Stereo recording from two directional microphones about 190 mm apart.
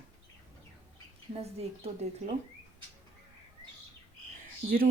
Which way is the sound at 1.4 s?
35° right (ahead or behind).